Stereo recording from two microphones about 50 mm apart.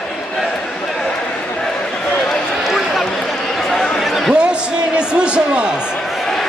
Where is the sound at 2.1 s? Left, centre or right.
Centre.